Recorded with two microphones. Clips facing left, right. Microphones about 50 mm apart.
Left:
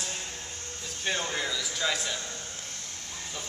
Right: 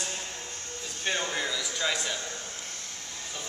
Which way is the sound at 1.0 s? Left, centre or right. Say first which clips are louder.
Even; centre.